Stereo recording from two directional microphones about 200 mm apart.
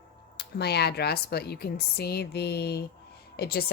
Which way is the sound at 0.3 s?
55° left (ahead or behind).